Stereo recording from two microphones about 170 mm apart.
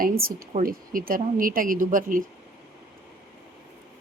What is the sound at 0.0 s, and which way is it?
Speech, 60° right (ahead or behind).